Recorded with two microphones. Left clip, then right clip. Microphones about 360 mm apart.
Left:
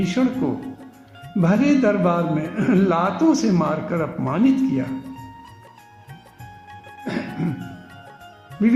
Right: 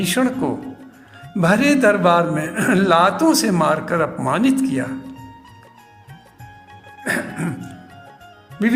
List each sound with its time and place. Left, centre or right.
0.0 s music: right
4.9 s music: centre
7.0 s music: right